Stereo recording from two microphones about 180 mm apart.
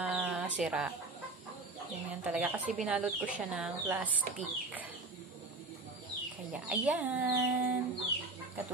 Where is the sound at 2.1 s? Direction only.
5° right (ahead or behind).